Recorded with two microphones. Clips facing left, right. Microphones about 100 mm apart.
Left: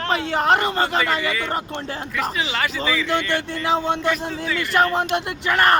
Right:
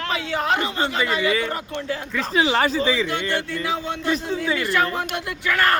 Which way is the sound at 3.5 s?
30° left (ahead or behind).